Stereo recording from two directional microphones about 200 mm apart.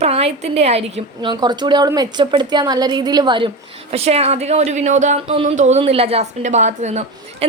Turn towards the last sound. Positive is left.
turn(degrees=-35)  # may be behind; listen again after turning